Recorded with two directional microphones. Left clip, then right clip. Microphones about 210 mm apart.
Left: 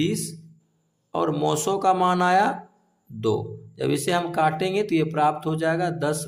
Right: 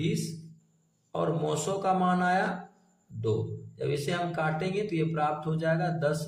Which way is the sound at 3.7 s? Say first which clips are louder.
Left 7 dB; 45° left (ahead or behind).